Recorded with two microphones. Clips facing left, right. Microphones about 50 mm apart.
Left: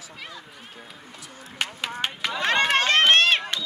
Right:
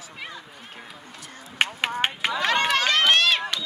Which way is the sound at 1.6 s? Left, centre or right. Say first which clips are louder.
Right 5 dB; right.